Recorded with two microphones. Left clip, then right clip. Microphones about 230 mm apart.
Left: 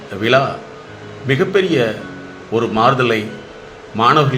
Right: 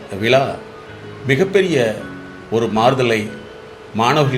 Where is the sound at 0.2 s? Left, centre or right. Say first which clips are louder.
Left 1 dB; right.